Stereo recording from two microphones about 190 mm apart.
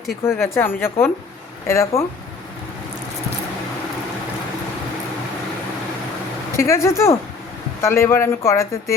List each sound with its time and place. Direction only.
0.3 s speech: 15° left (ahead or behind)
6.6 s speech: 15° left (ahead or behind)